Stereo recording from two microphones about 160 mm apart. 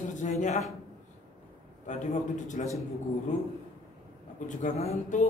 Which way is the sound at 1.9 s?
50° left (ahead or behind).